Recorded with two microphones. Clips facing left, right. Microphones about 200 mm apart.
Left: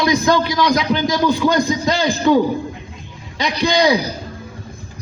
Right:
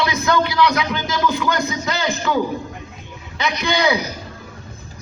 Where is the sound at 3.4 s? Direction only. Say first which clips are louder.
Left 4 dB; 30° left (ahead or behind).